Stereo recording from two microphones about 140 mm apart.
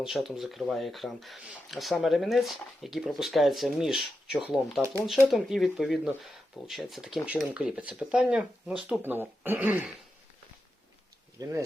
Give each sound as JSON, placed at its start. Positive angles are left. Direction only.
{"t": 0.0, "sound": "speech", "side_deg": 0}
{"t": 11.4, "sound": "speech", "side_deg": -25}